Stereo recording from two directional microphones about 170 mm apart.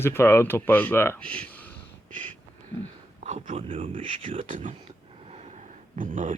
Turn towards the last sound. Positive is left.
turn(degrees=-50)  # may be behind; listen again after turning